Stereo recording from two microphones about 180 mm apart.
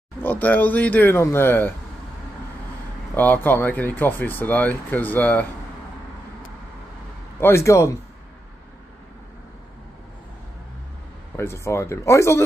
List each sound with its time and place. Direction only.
0.2 s speech: 10° left (ahead or behind)
3.2 s speech: 10° left (ahead or behind)
7.3 s speech: 15° left (ahead or behind)
11.3 s speech: 15° left (ahead or behind)